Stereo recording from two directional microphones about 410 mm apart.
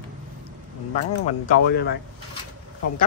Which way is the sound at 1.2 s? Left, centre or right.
Left.